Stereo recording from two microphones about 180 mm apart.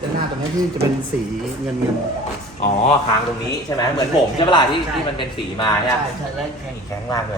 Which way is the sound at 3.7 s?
15° left (ahead or behind).